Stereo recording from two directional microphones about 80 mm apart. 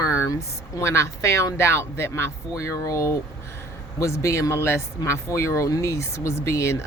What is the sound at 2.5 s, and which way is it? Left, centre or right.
Speech, left.